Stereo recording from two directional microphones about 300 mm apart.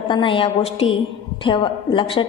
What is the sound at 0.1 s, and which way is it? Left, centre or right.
A woman's voice, centre.